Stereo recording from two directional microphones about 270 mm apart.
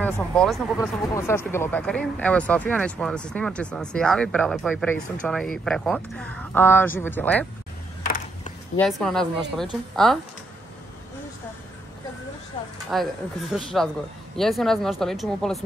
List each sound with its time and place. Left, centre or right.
0.0 s speech: centre
8.0 s a sound: left
8.7 s speech: centre
12.9 s speech: centre